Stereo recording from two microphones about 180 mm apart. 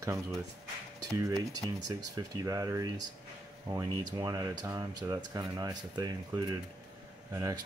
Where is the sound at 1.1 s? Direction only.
15° right (ahead or behind).